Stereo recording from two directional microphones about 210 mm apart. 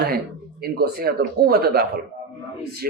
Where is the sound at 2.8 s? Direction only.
45° right (ahead or behind).